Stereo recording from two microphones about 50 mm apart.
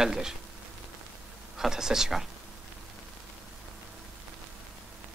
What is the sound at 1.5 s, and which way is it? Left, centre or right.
Speech, centre.